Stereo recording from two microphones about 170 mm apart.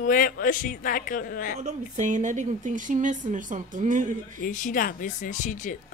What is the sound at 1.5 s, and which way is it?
Speech, 45° right (ahead or behind).